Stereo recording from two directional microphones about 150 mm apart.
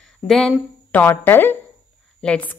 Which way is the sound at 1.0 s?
15° left (ahead or behind).